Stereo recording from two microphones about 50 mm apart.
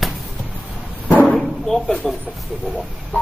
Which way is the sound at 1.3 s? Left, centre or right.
Centre.